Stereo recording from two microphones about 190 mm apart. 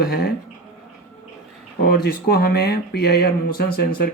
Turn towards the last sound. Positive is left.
turn(degrees=55)  # may be behind; listen again after turning